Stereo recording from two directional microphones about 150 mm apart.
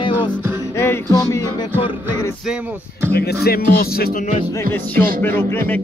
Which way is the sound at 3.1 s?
90° left.